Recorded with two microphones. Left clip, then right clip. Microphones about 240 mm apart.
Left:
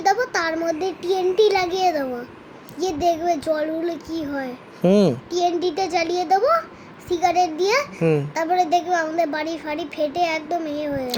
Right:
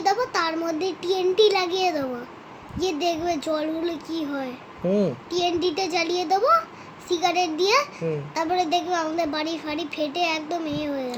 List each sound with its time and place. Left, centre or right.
0.0 s child singing: centre
2.7 s a child's voice: centre
4.8 s a child's voice: left
5.3 s a child's voice: centre